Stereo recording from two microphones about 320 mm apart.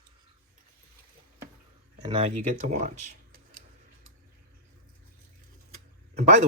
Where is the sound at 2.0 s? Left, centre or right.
Centre.